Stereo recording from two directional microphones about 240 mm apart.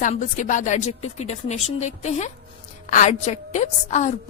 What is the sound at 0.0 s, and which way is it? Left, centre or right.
A woman's voice, left.